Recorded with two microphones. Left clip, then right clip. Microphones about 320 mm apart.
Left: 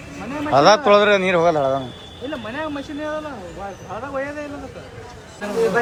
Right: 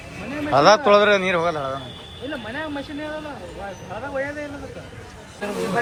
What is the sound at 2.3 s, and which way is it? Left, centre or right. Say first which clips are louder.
Speech: left 2 dB; left.